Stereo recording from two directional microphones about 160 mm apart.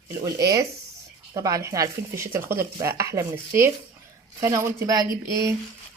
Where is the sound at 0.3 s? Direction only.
20° right (ahead or behind).